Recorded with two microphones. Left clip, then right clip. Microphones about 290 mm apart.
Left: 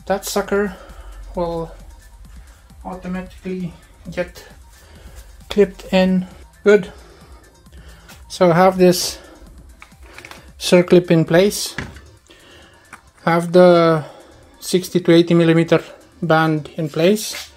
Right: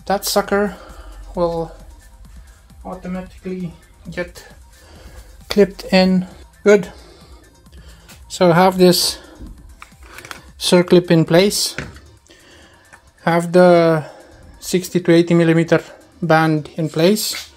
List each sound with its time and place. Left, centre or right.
0.0 s speech: right
4.1 s speech: centre
5.5 s speech: right
8.3 s speech: centre
10.6 s speech: centre
13.2 s speech: centre